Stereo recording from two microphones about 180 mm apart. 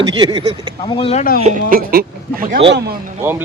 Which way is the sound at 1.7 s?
55° right (ahead or behind).